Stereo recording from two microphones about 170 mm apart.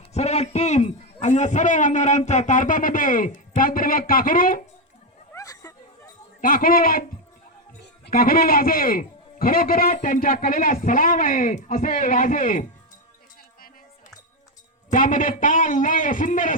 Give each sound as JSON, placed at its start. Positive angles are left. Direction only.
{"t": 0.1, "sound": "a man's voice", "side_deg": 40}
{"t": 5.3, "sound": "a sound", "side_deg": 20}
{"t": 6.4, "sound": "a man's voice", "side_deg": 55}
{"t": 14.9, "sound": "a man's voice", "side_deg": 55}